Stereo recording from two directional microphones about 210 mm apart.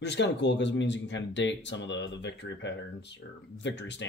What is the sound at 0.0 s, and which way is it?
Speech, 55° left (ahead or behind).